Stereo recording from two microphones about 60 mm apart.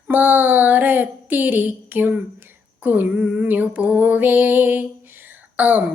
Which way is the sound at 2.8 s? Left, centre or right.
Right.